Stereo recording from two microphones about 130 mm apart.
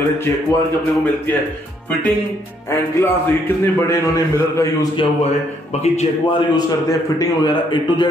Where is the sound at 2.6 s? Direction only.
20° left (ahead or behind).